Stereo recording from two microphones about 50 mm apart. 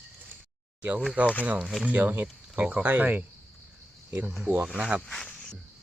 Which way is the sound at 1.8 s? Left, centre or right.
Right.